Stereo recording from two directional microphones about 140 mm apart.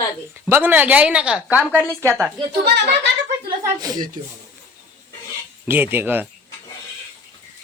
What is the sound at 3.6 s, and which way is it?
Speech, 25° right (ahead or behind).